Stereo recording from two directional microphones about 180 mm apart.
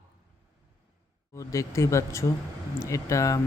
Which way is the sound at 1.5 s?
15° left (ahead or behind).